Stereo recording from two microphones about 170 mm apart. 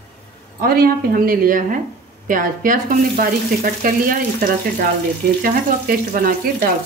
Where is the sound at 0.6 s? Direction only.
60° right (ahead or behind).